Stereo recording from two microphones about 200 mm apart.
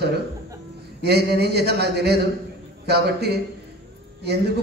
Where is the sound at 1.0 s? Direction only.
55° right (ahead or behind).